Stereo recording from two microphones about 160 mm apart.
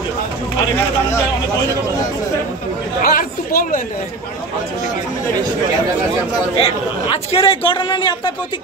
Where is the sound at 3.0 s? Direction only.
65° left (ahead or behind).